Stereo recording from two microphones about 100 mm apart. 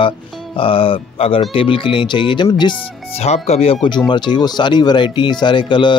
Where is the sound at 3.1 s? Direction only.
90° left.